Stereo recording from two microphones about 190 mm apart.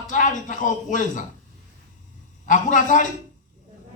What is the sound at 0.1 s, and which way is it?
A man's voice, 40° left (ahead or behind).